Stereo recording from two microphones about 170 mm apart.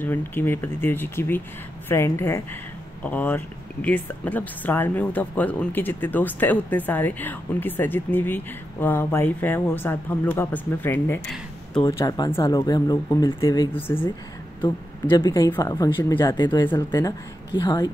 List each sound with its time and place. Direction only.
0.0 s speech: 10° left (ahead or behind)
11.8 s speech: 20° left (ahead or behind)
13.7 s speech: 10° left (ahead or behind)
14.6 s speech: 25° left (ahead or behind)